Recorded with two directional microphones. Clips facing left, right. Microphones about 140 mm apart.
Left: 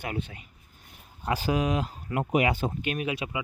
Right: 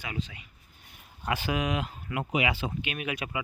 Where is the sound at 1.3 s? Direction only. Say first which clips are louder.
Left 3 dB; 35° left (ahead or behind).